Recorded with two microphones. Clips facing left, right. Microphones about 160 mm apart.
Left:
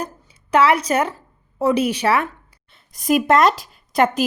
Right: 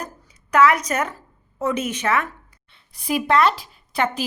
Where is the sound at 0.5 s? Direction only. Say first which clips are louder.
Left 1 dB; 30° left (ahead or behind).